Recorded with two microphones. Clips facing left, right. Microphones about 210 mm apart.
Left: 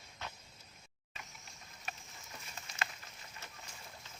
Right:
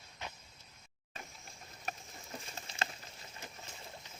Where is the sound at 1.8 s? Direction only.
40° right (ahead or behind).